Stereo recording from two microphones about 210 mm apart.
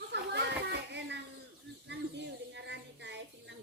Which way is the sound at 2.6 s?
55° right (ahead or behind).